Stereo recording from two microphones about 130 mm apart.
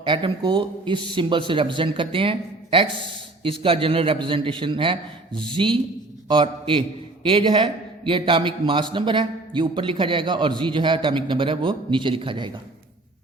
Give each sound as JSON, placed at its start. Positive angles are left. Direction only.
{"t": 0.0, "sound": "a man's voice", "side_deg": -40}